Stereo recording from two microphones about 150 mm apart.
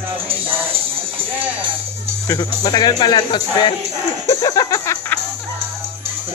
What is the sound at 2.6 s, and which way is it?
Speech, 25° left (ahead or behind).